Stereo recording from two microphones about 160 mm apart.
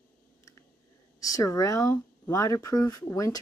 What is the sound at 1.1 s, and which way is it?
Speech, 20° left (ahead or behind).